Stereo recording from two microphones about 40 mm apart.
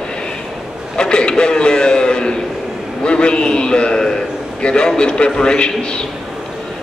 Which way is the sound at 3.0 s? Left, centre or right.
Left.